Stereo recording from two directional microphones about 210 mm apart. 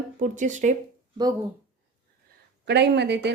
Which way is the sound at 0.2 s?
35° right (ahead or behind).